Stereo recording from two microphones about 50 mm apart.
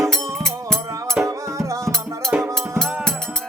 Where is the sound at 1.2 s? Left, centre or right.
Right.